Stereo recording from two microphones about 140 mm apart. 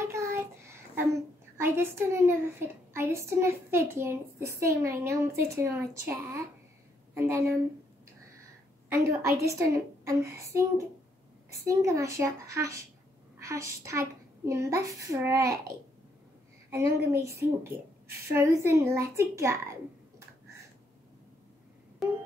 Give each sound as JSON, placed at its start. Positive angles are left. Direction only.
{"t": 0.0, "sound": "child singing", "side_deg": -20}
{"t": 1.6, "sound": "a child's voice", "side_deg": -15}
{"t": 8.8, "sound": "a child's voice", "side_deg": -20}
{"t": 16.7, "sound": "a child's voice", "side_deg": -20}